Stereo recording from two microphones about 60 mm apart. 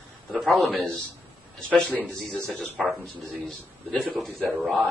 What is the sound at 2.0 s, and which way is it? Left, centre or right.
Speech, centre.